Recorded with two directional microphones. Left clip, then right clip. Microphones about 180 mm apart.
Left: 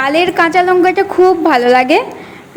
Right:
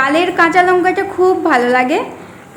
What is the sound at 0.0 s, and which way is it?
A woman's voice, 40° left (ahead or behind).